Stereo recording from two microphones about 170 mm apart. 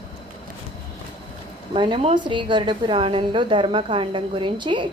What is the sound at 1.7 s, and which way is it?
A woman's voice, 30° right (ahead or behind).